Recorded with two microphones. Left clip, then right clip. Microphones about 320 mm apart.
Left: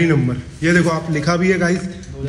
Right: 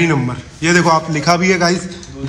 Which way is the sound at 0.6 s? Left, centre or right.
Centre.